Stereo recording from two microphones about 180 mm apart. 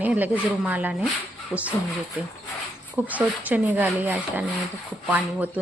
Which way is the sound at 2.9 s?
10° right (ahead or behind).